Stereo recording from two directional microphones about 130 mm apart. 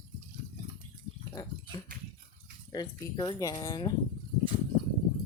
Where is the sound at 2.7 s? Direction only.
30° left (ahead or behind).